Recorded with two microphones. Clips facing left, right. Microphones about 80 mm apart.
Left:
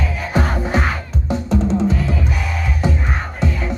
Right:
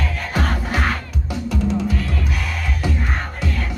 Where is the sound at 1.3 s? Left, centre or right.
Left.